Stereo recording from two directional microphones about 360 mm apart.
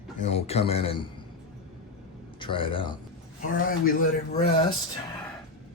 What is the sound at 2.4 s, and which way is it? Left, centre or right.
Speech, centre.